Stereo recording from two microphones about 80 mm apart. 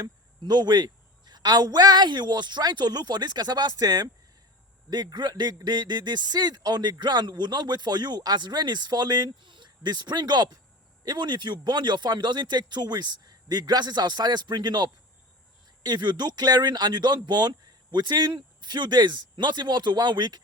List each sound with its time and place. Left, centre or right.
0.0 s a man's voice: right